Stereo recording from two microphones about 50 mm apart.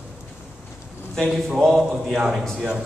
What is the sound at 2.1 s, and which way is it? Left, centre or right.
Speech, centre.